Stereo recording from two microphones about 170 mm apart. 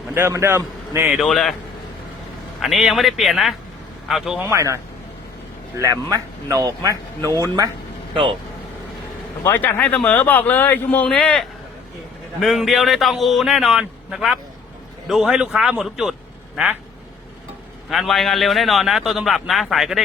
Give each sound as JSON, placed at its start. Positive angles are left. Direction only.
{"t": 0.1, "sound": "speech", "side_deg": -15}
{"t": 1.2, "sound": "a man's voice", "side_deg": 0}
{"t": 2.6, "sound": "a man's voice", "side_deg": 0}
{"t": 4.4, "sound": "speech", "side_deg": -15}
{"t": 8.1, "sound": "speech", "side_deg": -30}
{"t": 9.4, "sound": "a man's voice", "side_deg": 10}
{"t": 17.8, "sound": "a man's voice", "side_deg": 0}